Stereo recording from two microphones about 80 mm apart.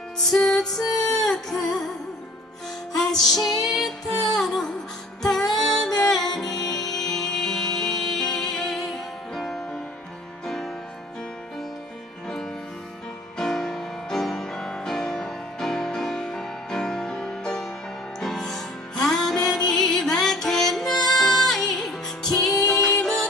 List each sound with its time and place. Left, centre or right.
0.3 s music: centre
3.0 s music: centre
6.5 s music: left
6.9 s music: centre
13.4 s music: centre